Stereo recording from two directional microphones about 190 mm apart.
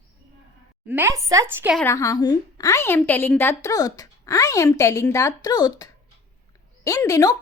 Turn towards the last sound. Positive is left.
turn(degrees=15)  # may be behind; listen again after turning